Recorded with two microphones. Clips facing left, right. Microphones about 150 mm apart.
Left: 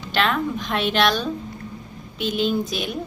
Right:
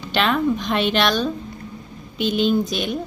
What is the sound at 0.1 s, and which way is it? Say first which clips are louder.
A woman's voice: right 3 dB; centre (ahead or behind).